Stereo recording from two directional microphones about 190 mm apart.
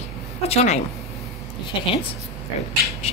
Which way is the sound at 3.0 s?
35° left (ahead or behind).